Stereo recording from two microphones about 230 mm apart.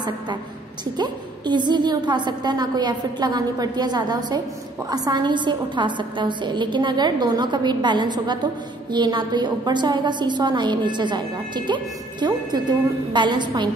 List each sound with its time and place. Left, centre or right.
0.9 s a woman's voice: centre